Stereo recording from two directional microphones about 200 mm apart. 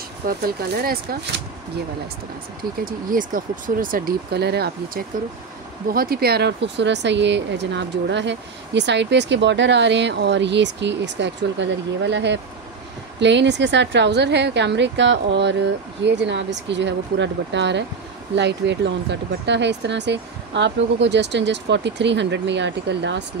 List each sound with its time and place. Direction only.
0.4 s speech: 50° right (ahead or behind)
2.8 s speech: 45° right (ahead or behind); by 23.2 s 60° right (ahead or behind)